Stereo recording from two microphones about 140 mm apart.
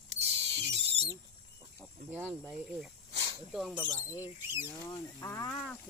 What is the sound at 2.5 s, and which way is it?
Speech, centre (ahead or behind).